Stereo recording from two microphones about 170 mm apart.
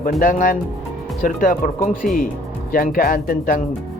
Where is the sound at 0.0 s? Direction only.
55° left (ahead or behind).